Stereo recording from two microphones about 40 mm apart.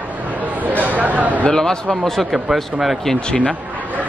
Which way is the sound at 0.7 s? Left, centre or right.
Right.